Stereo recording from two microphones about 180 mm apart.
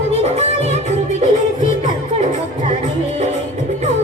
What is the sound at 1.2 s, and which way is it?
Music, 45° left (ahead or behind).